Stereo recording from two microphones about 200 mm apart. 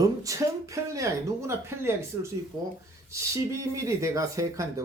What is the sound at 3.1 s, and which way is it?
Speech, 15° right (ahead or behind).